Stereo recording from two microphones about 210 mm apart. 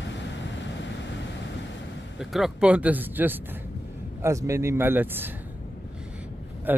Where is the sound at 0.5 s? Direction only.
60° left (ahead or behind).